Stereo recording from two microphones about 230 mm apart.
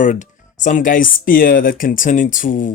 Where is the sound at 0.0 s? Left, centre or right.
Left.